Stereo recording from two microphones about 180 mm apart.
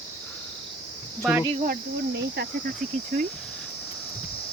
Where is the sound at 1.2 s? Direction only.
Centre (ahead or behind).